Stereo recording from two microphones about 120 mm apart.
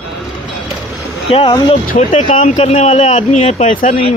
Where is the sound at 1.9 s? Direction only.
90° left.